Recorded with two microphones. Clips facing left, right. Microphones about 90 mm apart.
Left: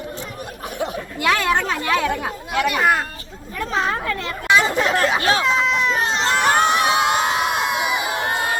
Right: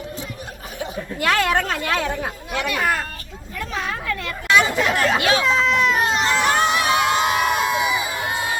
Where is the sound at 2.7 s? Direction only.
15° left (ahead or behind).